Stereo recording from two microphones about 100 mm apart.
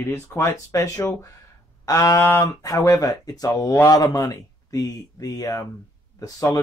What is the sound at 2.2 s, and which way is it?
Speech, 25° left (ahead or behind).